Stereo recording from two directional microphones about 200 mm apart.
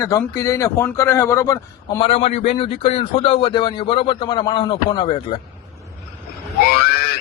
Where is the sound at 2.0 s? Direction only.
30° left (ahead or behind).